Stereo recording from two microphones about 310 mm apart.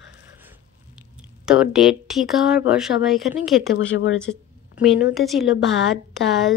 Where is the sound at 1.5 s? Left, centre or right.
Centre.